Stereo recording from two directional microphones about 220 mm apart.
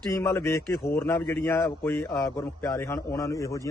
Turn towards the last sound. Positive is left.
turn(degrees=15)  # may be behind; listen again after turning